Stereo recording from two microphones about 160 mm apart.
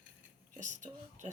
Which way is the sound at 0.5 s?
50° right (ahead or behind).